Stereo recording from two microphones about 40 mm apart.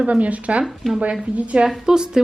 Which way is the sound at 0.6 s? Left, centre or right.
Centre.